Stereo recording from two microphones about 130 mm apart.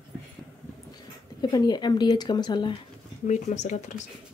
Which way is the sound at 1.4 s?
30° left (ahead or behind).